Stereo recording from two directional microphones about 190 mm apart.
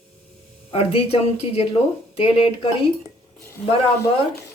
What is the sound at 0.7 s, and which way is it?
Speech, 30° left (ahead or behind).